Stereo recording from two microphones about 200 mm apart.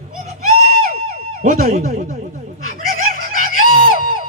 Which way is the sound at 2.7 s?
45° right (ahead or behind).